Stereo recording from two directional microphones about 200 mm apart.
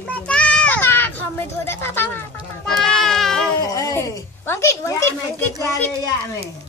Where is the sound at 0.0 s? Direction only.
5° left (ahead or behind).